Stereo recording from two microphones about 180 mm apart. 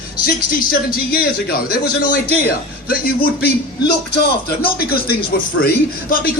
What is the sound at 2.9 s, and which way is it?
A man's voice, 55° left (ahead or behind).